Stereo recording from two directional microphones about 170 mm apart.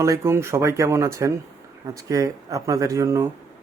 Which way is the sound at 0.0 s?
15° right (ahead or behind).